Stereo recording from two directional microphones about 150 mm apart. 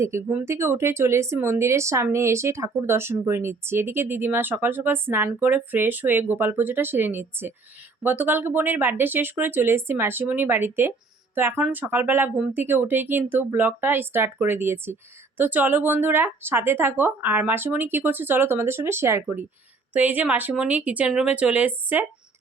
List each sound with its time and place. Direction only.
0.3 s speech: 15° right (ahead or behind)